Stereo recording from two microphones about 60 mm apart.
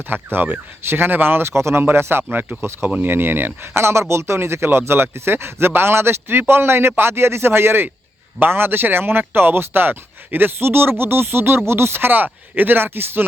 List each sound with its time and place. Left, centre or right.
0.1 s speech: right